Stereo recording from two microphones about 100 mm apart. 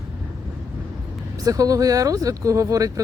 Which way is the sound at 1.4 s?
35° right (ahead or behind).